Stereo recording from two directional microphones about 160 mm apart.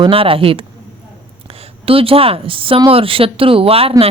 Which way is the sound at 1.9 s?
35° right (ahead or behind).